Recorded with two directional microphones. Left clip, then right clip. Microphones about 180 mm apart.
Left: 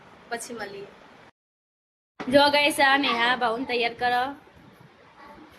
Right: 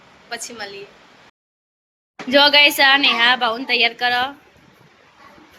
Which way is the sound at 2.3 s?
Centre (ahead or behind).